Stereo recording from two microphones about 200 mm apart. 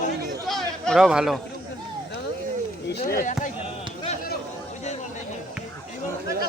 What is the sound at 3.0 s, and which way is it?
Speech, 45° left (ahead or behind).